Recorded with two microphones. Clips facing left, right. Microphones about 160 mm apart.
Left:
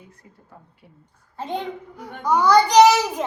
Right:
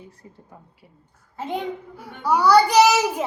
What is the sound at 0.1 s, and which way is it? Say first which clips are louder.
Speech: right 4 dB; 30° right (ahead or behind).